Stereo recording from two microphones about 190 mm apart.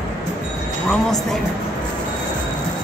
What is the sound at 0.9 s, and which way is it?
Speech, centre (ahead or behind).